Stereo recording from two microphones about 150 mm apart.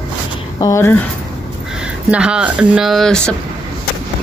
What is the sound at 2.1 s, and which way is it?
Speech, 5° right (ahead or behind).